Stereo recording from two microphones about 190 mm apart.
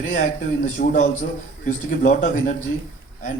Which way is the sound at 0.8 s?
55° left (ahead or behind).